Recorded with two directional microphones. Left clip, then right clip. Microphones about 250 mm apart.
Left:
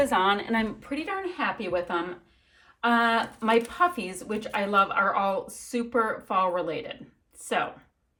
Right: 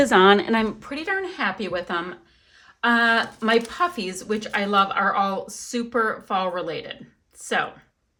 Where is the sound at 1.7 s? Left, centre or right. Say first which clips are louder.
Right 1 dB; centre.